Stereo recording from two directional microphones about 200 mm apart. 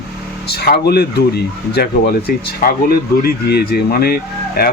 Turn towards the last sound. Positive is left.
turn(degrees=50)  # may be behind; listen again after turning